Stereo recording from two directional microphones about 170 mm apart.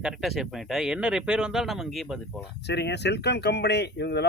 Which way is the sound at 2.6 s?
80° left.